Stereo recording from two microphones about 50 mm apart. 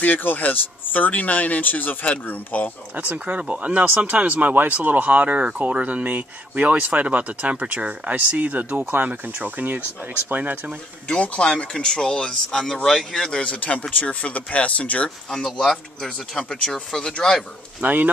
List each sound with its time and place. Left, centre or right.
0.0 s speech: left
3.0 s speech: right
11.1 s speech: centre
13.4 s speech: left
15.3 s speech: centre
17.8 s speech: right